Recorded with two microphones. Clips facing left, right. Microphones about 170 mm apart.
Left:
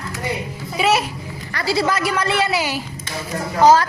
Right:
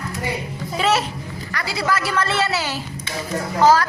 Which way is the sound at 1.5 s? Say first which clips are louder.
Left 3 dB; 30° left (ahead or behind).